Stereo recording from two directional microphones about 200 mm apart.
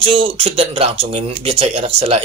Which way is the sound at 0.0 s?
25° right (ahead or behind).